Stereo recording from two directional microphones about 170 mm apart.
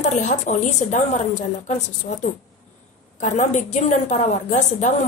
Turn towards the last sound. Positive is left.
turn(degrees=45)  # may be behind; listen again after turning